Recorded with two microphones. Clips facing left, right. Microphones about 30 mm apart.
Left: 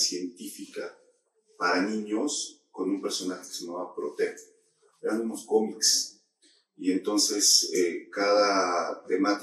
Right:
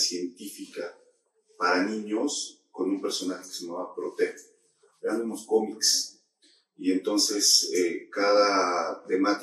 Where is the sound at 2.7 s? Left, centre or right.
Right.